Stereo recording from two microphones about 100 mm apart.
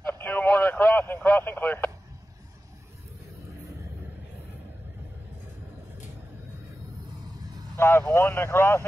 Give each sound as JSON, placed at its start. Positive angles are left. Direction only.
{"t": 0.0, "sound": "radio", "side_deg": 20}
{"t": 7.7, "sound": "vehicle", "side_deg": 25}
{"t": 8.1, "sound": "speech", "side_deg": 25}